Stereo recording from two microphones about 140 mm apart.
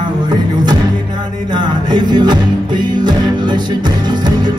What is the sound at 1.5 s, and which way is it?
Music, 30° right (ahead or behind).